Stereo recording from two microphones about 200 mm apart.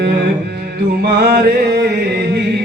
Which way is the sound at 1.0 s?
50° right (ahead or behind).